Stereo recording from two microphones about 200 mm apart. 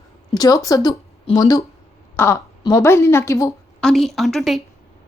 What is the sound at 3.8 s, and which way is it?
Speech, centre (ahead or behind).